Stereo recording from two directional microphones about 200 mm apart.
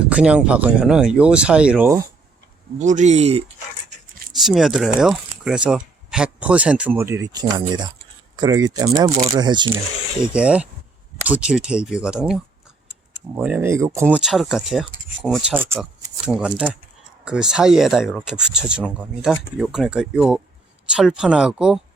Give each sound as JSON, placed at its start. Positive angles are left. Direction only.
{"t": 0.1, "sound": "speech", "side_deg": -5}
{"t": 2.7, "sound": "speech", "side_deg": -35}
{"t": 4.3, "sound": "speech", "side_deg": 0}
{"t": 10.3, "sound": "speech", "side_deg": -5}